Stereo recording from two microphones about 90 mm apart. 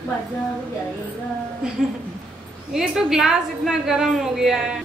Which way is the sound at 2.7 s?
5° right (ahead or behind).